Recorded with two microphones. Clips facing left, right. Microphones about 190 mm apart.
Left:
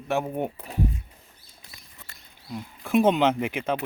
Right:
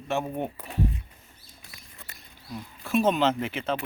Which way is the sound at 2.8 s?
15° left (ahead or behind).